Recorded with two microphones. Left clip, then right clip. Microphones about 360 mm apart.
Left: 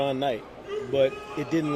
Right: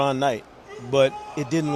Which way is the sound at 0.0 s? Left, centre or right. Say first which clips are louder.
Right 4 dB; right.